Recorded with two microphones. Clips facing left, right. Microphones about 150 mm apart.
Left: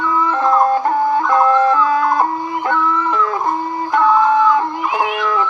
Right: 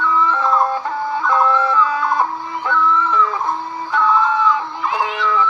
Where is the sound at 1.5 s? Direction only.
45° left (ahead or behind).